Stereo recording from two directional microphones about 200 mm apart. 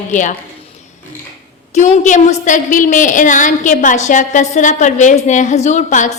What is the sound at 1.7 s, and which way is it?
A woman's voice, 35° left (ahead or behind).